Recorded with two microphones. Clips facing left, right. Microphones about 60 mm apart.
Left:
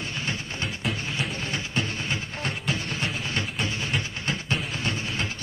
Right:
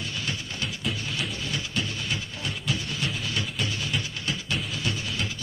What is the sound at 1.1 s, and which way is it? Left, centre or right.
Music, left.